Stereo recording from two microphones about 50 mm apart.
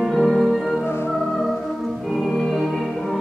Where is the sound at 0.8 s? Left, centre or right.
Left.